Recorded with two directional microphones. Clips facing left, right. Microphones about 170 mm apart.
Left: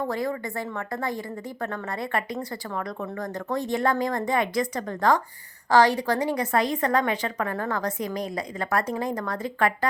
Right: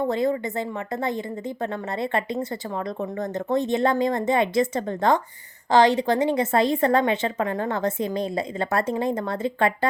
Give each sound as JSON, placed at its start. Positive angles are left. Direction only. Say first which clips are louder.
{"t": 0.1, "sound": "a woman's voice", "louder": "right 5 dB", "side_deg": -20}